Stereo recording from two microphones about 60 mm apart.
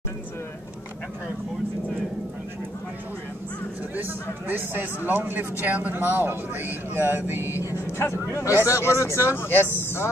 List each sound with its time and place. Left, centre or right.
3.9 s a man's voice: right
7.7 s speech: left